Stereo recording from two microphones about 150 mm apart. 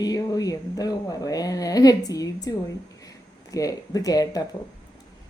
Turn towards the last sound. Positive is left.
turn(degrees=25)  # may be behind; listen again after turning